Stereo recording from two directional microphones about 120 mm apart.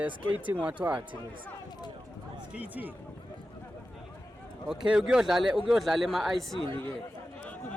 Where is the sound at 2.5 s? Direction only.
15° right (ahead or behind).